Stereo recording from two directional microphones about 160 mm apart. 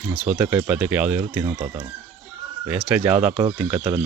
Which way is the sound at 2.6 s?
5° right (ahead or behind).